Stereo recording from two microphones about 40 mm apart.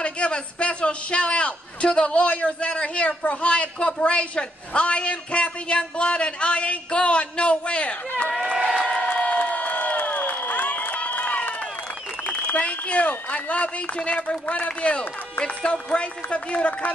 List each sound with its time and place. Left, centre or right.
0.0 s a man's voice: left
8.3 s run: right
9.0 s crowd: left
10.0 s crowd: left
10.7 s run: left
12.5 s speech: left